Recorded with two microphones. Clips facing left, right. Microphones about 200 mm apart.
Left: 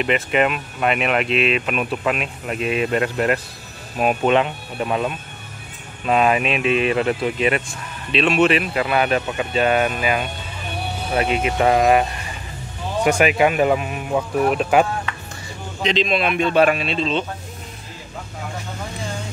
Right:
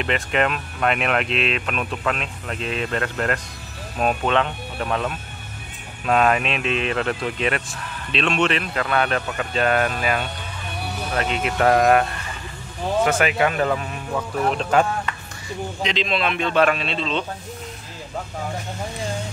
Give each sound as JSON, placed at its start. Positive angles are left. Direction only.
{"t": 0.0, "sound": "speech", "side_deg": 5}
{"t": 13.0, "sound": "speech", "side_deg": 15}
{"t": 15.8, "sound": "speech", "side_deg": 20}